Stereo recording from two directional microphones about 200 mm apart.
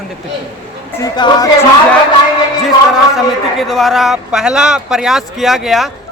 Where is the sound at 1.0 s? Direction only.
20° left (ahead or behind).